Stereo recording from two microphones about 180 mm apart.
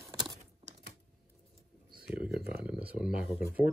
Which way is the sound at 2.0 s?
5° right (ahead or behind).